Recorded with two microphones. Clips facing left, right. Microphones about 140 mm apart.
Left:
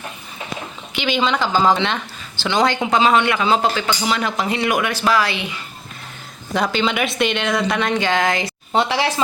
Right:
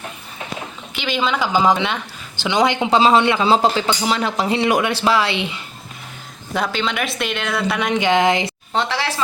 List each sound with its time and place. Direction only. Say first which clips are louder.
0.9 s speech: left 1 dB; centre (ahead or behind); by 5.6 s 25° right (ahead or behind)
6.5 s speech: left 2 dB; centre (ahead or behind); by 8.5 s 20° right (ahead or behind)
8.7 s speech: left 4 dB; 15° left (ahead or behind)